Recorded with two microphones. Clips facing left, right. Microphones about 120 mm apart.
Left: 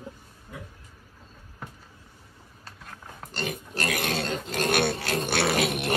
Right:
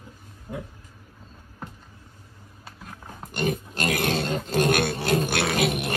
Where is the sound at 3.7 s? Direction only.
25° right (ahead or behind).